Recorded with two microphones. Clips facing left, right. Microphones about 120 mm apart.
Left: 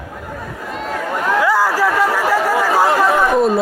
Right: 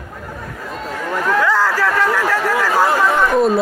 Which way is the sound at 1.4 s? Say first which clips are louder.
Left 2 dB; 10° left (ahead or behind).